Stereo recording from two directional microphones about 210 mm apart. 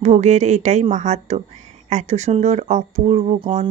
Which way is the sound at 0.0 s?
35° right (ahead or behind).